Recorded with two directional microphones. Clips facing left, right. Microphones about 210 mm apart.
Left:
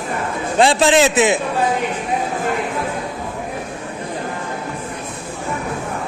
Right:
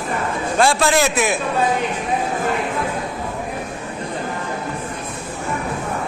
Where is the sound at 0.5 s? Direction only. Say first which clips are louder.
Left 3 dB; 20° left (ahead or behind).